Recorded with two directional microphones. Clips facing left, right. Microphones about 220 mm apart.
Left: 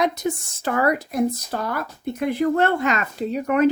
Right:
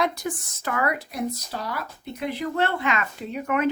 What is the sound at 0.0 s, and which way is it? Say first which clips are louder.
Speech: left 4 dB; 25° left (ahead or behind).